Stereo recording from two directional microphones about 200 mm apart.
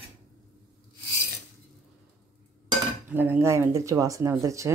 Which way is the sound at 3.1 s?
10° right (ahead or behind).